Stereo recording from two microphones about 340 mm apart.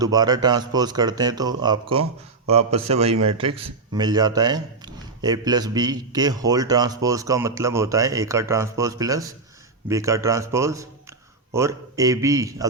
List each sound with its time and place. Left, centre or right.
0.0 s speech: centre